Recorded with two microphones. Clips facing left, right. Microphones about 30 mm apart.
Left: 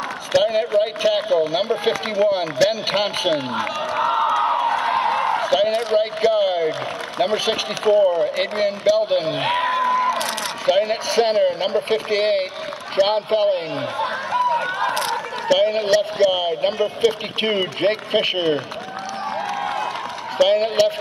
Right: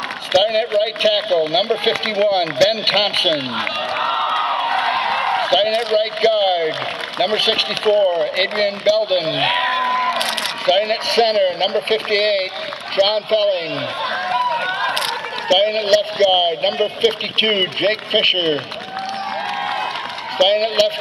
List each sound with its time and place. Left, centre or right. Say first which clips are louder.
0.4 s a man's voice: right 1 dB; right
8.0 s speech: right 1 dB; right
8.4 s speech: right 3 dB; right
14.0 s run: right 2 dB; right
15.6 s speech: right 2 dB; right
20.4 s speech: right 2 dB; right